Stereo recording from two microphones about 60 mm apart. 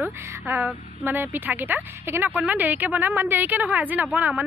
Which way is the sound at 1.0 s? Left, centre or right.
Right.